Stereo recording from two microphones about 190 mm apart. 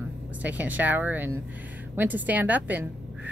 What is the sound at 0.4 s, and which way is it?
A woman's voice, 10° right (ahead or behind).